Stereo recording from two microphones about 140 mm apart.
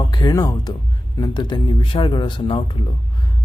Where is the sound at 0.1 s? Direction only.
30° left (ahead or behind).